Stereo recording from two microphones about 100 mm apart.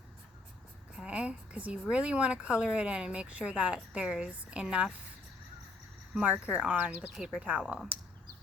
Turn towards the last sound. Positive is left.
turn(degrees=-10)  # may be behind; listen again after turning